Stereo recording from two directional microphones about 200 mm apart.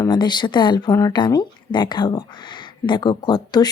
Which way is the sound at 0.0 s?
20° left (ahead or behind).